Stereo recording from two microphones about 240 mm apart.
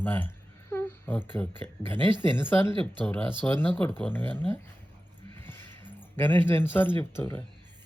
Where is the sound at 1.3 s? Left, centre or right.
Centre.